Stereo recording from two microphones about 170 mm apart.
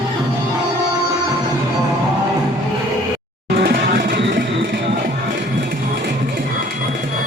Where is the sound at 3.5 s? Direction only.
65° right (ahead or behind).